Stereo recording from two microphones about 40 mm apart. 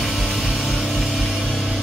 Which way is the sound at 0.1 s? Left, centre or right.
Centre.